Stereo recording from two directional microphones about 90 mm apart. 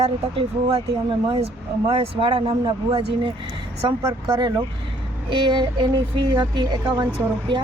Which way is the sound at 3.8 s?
60° right (ahead or behind).